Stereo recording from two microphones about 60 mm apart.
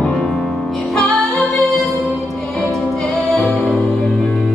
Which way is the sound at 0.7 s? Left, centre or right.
Centre.